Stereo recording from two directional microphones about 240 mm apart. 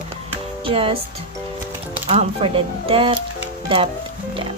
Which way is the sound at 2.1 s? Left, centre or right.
Right.